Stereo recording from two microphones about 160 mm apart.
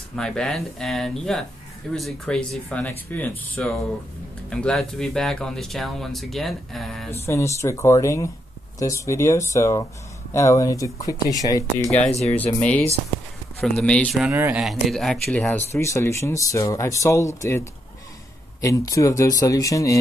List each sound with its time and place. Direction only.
0.1 s speech: 5° left (ahead or behind)
7.2 s speech: 20° left (ahead or behind)
11.9 s speech: 40° left (ahead or behind)
12.3 s speech: 10° left (ahead or behind)
14.3 s speech: 15° right (ahead or behind)
14.6 s speech: centre (ahead or behind); by 20.0 s 20° left (ahead or behind)